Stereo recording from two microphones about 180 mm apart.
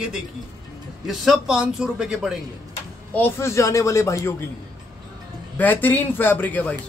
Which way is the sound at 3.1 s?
15° left (ahead or behind).